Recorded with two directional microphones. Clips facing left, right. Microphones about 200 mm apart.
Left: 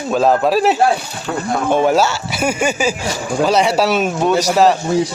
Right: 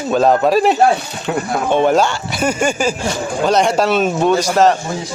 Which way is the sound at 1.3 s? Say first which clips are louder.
Right 3 dB; 15° right (ahead or behind).